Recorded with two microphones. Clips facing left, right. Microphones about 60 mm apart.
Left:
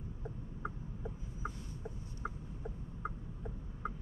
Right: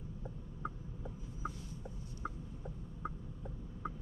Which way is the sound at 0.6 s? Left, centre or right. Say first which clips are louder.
Right 1 dB; centre.